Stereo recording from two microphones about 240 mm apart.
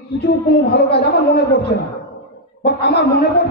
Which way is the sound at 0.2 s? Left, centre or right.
Left.